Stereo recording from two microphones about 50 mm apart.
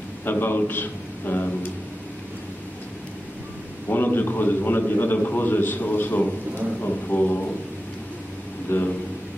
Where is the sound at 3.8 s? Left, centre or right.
Left.